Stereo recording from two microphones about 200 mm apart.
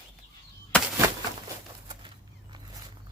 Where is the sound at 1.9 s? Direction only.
25° right (ahead or behind).